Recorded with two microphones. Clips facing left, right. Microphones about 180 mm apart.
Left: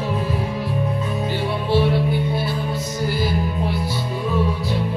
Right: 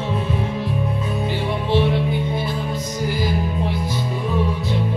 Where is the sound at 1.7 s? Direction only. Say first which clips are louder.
Left 1 dB; 20° right (ahead or behind).